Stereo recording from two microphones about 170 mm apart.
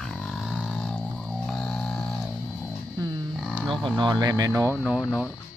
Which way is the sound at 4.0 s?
25° right (ahead or behind).